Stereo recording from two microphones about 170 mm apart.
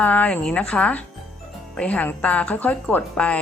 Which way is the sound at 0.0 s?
10° left (ahead or behind).